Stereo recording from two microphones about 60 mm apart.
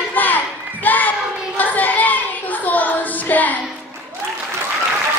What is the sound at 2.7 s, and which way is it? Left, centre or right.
Child singing, left.